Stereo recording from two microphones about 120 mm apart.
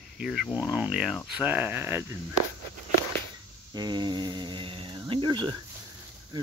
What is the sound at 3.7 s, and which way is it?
Speech, 35° right (ahead or behind).